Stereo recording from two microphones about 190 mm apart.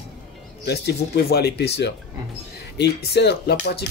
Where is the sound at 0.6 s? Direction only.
60° left (ahead or behind).